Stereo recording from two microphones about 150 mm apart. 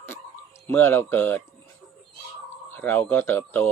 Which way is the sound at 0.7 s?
15° left (ahead or behind).